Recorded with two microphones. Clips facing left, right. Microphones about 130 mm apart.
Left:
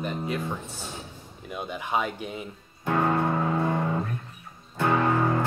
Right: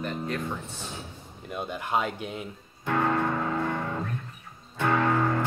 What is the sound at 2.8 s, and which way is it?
Music, 15° left (ahead or behind).